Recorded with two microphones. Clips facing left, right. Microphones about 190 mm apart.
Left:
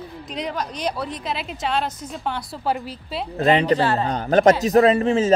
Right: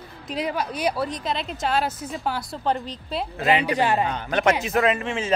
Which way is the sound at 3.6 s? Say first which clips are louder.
Left 3 dB; 15° right (ahead or behind).